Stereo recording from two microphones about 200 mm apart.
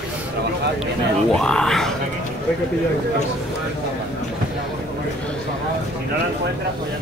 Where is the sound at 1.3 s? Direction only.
5° left (ahead or behind).